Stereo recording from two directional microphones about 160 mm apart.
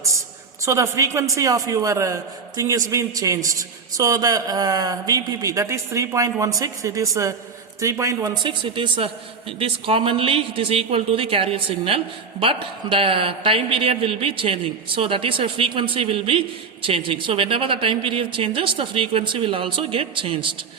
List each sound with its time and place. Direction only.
0.0 s a man's voice: 20° right (ahead or behind)